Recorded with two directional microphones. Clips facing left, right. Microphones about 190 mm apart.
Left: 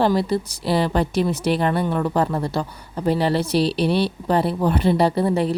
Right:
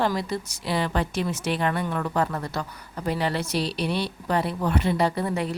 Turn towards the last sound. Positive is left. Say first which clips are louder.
# left 6 dB
turn(degrees=30)  # may be behind; listen again after turning